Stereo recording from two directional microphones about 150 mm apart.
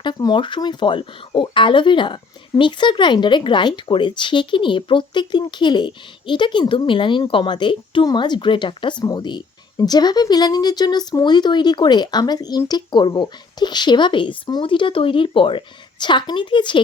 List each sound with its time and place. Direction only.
0.0 s speech: 30° left (ahead or behind)